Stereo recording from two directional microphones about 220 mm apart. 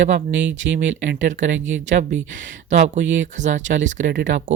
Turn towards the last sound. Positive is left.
turn(degrees=-35)  # may be behind; listen again after turning